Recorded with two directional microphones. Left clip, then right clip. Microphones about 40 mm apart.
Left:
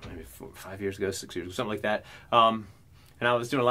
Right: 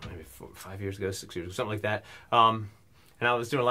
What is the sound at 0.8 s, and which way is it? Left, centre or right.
Speech, left.